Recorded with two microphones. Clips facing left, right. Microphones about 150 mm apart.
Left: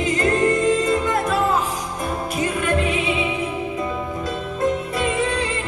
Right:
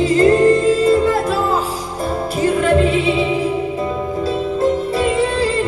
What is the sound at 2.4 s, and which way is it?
Music, 30° right (ahead or behind).